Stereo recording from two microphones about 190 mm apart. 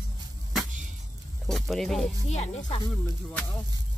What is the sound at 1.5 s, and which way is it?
Speech, centre (ahead or behind).